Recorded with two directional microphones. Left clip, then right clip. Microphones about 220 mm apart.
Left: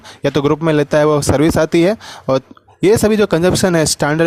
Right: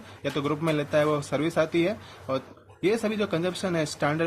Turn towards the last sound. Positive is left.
turn(degrees=45)  # may be behind; listen again after turning